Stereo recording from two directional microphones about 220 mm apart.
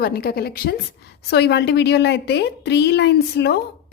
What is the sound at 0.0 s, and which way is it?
A woman's voice, 45° left (ahead or behind).